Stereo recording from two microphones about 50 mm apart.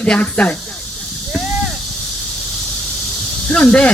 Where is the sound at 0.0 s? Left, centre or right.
Left.